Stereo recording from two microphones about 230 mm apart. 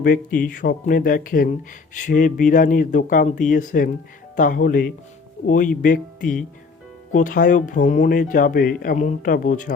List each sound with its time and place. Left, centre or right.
0.0 s speech: left